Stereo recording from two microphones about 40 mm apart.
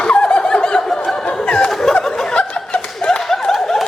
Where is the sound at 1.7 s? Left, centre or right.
Centre.